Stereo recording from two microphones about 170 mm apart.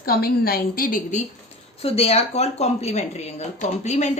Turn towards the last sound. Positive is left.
turn(degrees=40)  # may be behind; listen again after turning